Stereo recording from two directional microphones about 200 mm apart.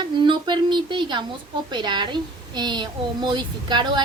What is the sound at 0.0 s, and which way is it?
A woman's voice, 25° right (ahead or behind).